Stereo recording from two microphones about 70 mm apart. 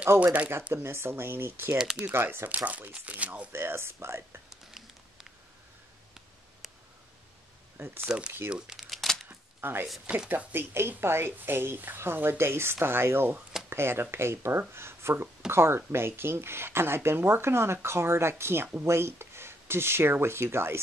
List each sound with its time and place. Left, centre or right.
0.2 s speech: right
0.8 s speech: right
3.5 s speech: right
4.5 s a sound: centre
7.7 s speech: right
8.5 s speech: centre
8.7 s crumpling: centre
9.3 s a sound: right
10.0 s speech: centre
10.5 s speech: right